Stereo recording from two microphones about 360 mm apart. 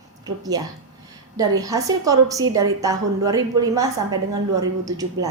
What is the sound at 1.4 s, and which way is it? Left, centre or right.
A woman's voice, centre.